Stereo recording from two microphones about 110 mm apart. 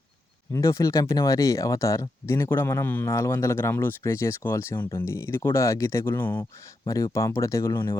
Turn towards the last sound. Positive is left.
turn(degrees=30)  # may be behind; listen again after turning